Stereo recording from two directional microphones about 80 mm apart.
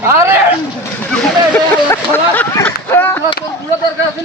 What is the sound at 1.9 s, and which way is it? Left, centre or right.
Speech, left.